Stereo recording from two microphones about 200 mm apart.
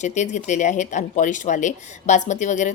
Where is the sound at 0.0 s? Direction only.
35° left (ahead or behind).